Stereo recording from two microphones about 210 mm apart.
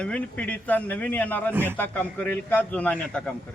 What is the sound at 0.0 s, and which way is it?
A man's voice, 5° left (ahead or behind).